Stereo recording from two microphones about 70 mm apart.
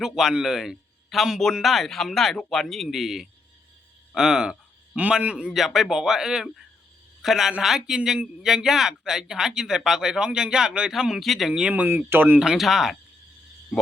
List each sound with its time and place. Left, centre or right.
0.0 s a man's voice: centre
4.9 s a man's voice: centre
5.5 s a man's voice: centre
11.7 s speech: right
12.4 s speech: centre